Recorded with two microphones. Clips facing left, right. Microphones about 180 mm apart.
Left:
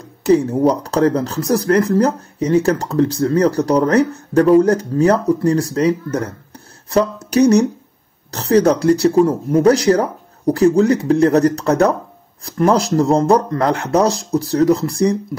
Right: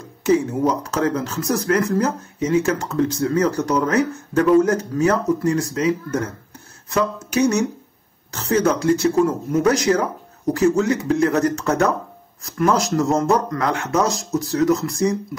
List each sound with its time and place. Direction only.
0.2 s speech: 35° left (ahead or behind)